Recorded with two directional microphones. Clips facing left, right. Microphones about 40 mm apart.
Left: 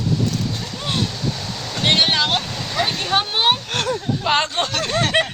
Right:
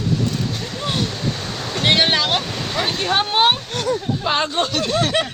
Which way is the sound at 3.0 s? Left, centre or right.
Centre.